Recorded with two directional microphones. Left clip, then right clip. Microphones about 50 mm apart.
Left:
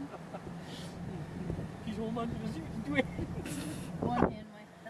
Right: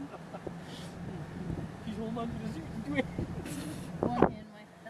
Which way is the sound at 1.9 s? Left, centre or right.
Left.